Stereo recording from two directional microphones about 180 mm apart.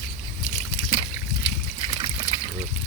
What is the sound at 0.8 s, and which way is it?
Trickle, 55° left (ahead or behind).